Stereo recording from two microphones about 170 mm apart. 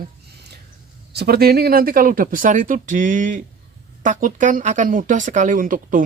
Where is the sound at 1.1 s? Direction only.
70° right (ahead or behind).